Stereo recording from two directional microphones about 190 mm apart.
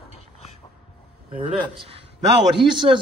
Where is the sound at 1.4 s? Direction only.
30° right (ahead or behind).